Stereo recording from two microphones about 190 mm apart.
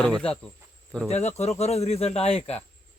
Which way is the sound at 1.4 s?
35° left (ahead or behind).